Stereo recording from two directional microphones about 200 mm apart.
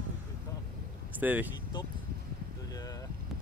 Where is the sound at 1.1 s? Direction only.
10° right (ahead or behind).